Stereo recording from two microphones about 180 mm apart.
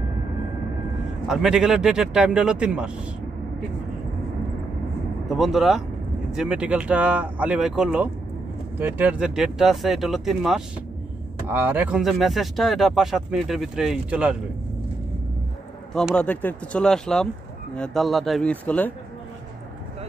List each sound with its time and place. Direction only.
1.2 s speech: centre (ahead or behind)
5.3 s speech: centre (ahead or behind)
15.9 s speech: 5° left (ahead or behind)